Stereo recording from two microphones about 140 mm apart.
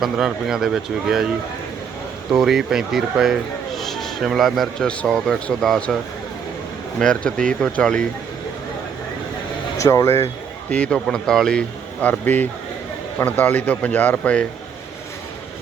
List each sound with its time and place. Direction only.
0.0 s speech: 5° right (ahead or behind)
2.3 s a man's voice: centre (ahead or behind)
7.0 s speech: 5° left (ahead or behind)
9.7 s speech: 20° left (ahead or behind)
10.7 s speech: 10° left (ahead or behind)